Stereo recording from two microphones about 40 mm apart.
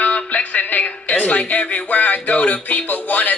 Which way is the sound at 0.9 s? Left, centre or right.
Left.